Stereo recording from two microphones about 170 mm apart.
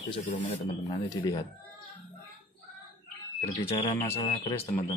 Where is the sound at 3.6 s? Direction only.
35° left (ahead or behind).